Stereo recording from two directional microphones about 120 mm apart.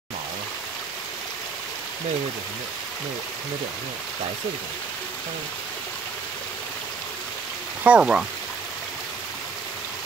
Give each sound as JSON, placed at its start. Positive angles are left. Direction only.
{"t": 7.8, "sound": "speech", "side_deg": -10}